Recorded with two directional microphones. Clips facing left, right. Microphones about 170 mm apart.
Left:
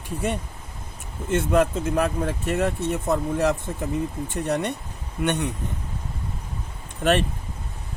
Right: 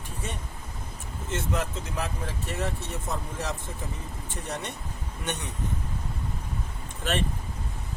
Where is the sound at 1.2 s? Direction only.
55° left (ahead or behind).